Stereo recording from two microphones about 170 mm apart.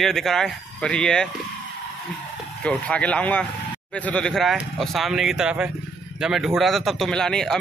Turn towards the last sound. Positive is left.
turn(degrees=5)  # may be behind; listen again after turning